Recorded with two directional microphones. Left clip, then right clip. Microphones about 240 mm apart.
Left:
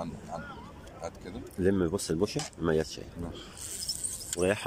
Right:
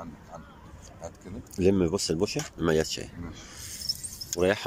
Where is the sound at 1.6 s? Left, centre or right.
Centre.